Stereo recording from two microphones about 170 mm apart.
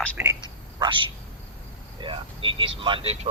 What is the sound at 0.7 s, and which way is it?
Speech, 30° right (ahead or behind).